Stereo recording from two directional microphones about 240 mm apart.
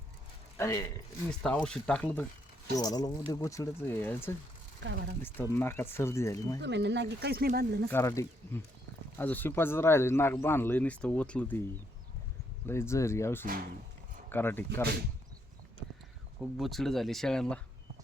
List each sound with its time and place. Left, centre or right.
0.5 s speech: centre
4.8 s speech: right
5.2 s speech: centre
6.6 s speech: right
7.9 s speech: centre
12.6 s speech: centre
16.4 s speech: centre